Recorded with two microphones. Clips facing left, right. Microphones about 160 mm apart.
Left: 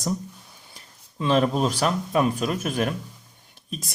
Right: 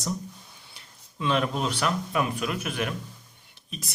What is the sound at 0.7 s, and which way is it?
Speech, 35° left (ahead or behind).